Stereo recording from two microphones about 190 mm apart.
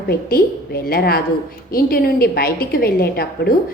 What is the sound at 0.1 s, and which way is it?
A woman's voice, 55° left (ahead or behind).